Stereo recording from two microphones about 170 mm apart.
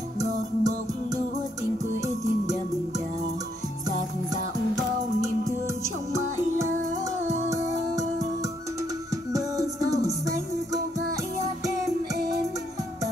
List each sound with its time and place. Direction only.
0.2 s music: 20° right (ahead or behind)
9.3 s music: 20° right (ahead or behind)